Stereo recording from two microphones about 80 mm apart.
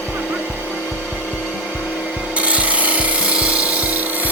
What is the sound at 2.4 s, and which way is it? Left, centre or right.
Rub, centre.